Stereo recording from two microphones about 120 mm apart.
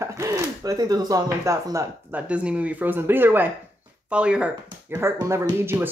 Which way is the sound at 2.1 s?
10° right (ahead or behind).